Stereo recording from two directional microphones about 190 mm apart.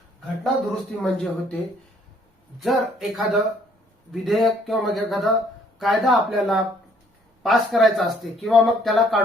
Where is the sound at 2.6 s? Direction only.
Centre (ahead or behind).